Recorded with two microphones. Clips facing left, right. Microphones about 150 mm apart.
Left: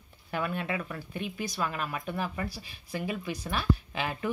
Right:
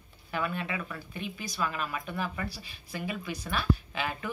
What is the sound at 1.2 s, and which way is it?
Speech, 55° left (ahead or behind).